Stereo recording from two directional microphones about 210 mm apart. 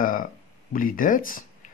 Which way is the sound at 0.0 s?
40° left (ahead or behind).